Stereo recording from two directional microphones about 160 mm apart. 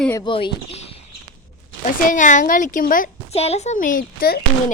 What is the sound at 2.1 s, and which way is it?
A woman's voice, 50° left (ahead or behind).